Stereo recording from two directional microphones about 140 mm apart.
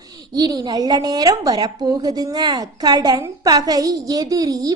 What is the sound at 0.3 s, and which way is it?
A woman's voice, 30° right (ahead or behind).